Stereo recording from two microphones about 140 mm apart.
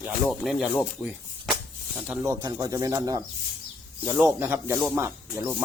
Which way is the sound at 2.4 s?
25° right (ahead or behind).